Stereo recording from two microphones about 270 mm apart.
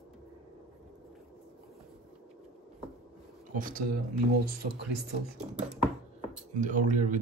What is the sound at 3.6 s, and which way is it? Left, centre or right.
Speech, right.